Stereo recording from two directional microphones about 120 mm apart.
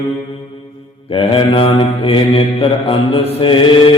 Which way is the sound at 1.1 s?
45° left (ahead or behind).